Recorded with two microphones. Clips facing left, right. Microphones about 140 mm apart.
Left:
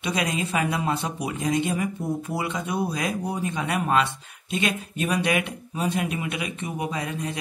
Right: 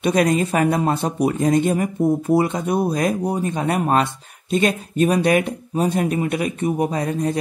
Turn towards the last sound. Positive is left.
turn(degrees=-40)  # may be behind; listen again after turning